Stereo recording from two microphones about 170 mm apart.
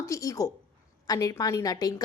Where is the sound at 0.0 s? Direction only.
20° left (ahead or behind).